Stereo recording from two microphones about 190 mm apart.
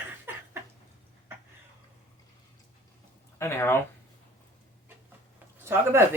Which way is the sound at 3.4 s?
15° left (ahead or behind).